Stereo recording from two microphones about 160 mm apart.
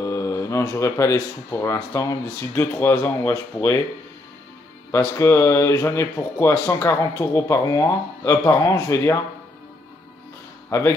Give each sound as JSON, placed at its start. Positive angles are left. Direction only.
{"t": 0.0, "sound": "speech", "side_deg": 20}
{"t": 4.9, "sound": "speech", "side_deg": 15}
{"t": 10.7, "sound": "speech", "side_deg": 15}